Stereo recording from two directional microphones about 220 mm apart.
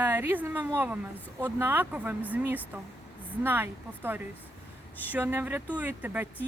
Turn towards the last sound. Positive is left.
turn(degrees=-10)  # may be behind; listen again after turning